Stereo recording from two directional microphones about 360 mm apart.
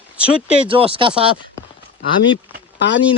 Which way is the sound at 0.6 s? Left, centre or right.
Centre.